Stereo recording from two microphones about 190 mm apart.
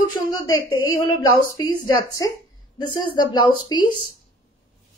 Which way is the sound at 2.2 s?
20° left (ahead or behind).